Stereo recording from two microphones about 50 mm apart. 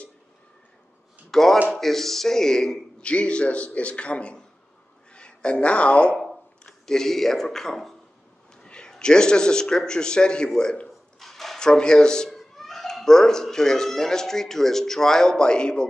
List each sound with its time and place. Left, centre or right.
1.3 s a man's voice: centre
3.1 s a man's voice: left
6.9 s a man's voice: centre
11.1 s a sound: centre
11.6 s a man's voice: centre
12.3 s speech: centre